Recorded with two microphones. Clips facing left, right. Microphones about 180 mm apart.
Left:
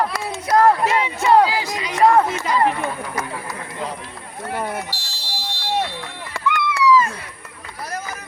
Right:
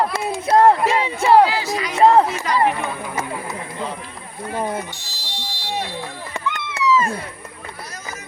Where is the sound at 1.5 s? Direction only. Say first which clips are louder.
Right 1 dB; 15° left (ahead or behind).